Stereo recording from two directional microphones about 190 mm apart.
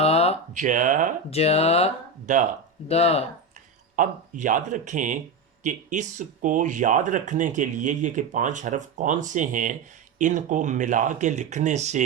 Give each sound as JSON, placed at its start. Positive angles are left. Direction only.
{"t": 0.0, "sound": "a sound", "side_deg": 35}
{"t": 0.5, "sound": "speech", "side_deg": -40}
{"t": 1.3, "sound": "speech", "side_deg": 35}
{"t": 2.3, "sound": "speech", "side_deg": -40}
{"t": 2.9, "sound": "speech", "side_deg": 35}
{"t": 3.9, "sound": "speech", "side_deg": -45}